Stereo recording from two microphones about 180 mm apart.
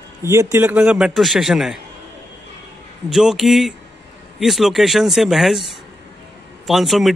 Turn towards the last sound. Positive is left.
turn(degrees=0)  # may be behind; listen again after turning